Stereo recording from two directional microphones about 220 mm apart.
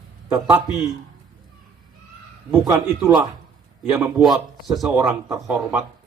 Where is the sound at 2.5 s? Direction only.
10° right (ahead or behind).